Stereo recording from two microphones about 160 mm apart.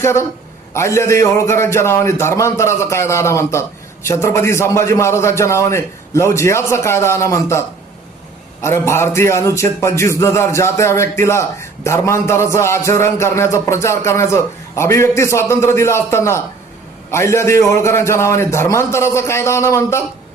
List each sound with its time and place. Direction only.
0.0 s a man's voice: 15° left (ahead or behind)
8.6 s a man's voice: 15° left (ahead or behind)